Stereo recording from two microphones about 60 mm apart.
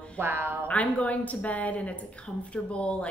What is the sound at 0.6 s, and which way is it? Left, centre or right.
A woman's voice, left.